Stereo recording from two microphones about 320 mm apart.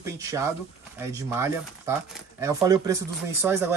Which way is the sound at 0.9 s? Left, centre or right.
Centre.